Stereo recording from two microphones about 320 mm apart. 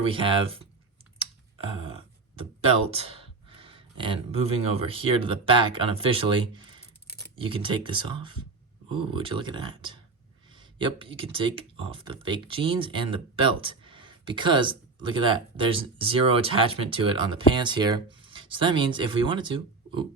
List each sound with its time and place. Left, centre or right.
0.0 s speech: centre
1.2 s a sound: centre
2.8 s speech: centre